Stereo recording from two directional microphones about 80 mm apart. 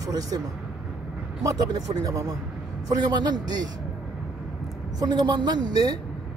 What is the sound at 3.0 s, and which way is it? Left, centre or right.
Speech, right.